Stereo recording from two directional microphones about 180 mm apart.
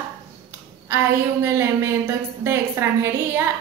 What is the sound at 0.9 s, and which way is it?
A woman's voice, 15° right (ahead or behind).